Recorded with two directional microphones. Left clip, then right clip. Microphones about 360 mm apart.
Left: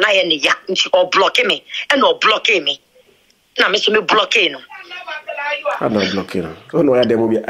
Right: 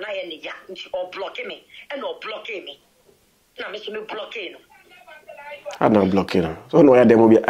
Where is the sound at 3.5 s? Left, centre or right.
Left.